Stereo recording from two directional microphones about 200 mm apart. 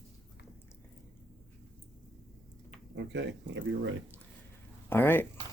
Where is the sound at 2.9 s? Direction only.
60° right (ahead or behind).